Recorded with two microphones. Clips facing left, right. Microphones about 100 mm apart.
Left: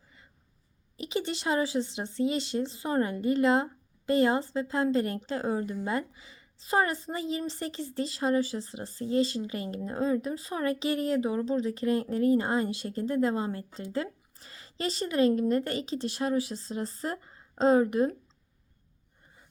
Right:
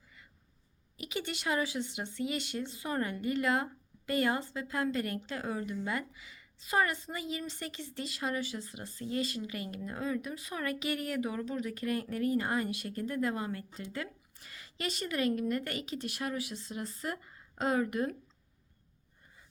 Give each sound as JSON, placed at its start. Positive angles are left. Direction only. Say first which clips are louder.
{"t": 0.9, "sound": "speech", "louder": "left 6 dB", "side_deg": 30}